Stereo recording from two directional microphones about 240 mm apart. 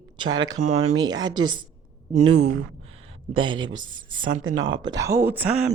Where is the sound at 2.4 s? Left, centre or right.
Right.